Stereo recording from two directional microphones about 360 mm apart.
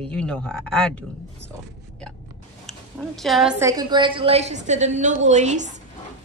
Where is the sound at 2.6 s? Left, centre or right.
Centre.